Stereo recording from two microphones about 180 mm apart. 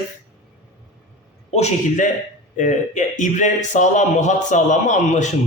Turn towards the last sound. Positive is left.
turn(degrees=40)  # may be behind; listen again after turning